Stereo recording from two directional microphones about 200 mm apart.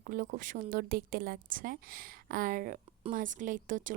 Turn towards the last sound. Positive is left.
turn(degrees=-40)  # may be behind; listen again after turning